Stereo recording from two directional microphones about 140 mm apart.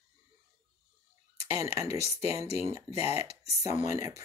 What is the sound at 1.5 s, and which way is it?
Speech, 20° right (ahead or behind).